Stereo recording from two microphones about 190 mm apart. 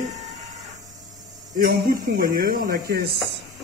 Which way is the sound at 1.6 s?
45° right (ahead or behind).